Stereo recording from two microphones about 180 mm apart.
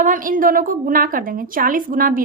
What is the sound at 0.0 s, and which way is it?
A woman's voice, 45° right (ahead or behind).